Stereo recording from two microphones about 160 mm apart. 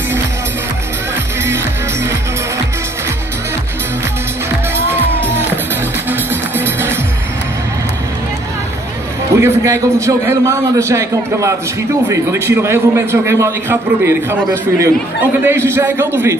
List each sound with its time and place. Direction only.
6.0 s music: 10° right (ahead or behind)
9.4 s a man's voice: 20° right (ahead or behind)